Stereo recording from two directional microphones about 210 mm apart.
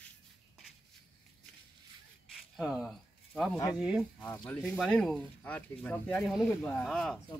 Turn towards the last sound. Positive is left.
turn(degrees=5)  # may be behind; listen again after turning